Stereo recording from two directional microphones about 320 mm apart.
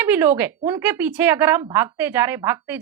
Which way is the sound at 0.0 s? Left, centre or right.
Centre.